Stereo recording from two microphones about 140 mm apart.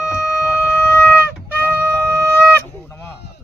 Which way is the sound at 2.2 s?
15° right (ahead or behind).